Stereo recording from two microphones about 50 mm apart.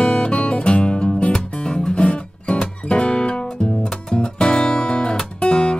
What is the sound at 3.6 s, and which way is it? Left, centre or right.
Guitar, centre.